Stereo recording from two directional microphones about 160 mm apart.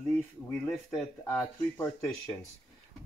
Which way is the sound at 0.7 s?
5° left (ahead or behind).